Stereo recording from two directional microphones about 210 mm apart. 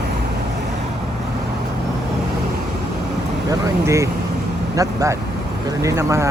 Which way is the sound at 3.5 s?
15° right (ahead or behind).